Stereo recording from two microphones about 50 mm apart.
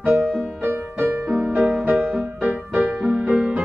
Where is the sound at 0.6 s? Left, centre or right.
Right.